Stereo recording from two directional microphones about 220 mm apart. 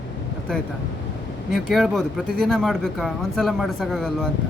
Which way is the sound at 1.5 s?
Centre (ahead or behind).